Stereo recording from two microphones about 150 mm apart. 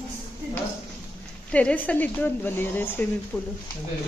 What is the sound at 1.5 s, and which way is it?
Speech, 10° left (ahead or behind).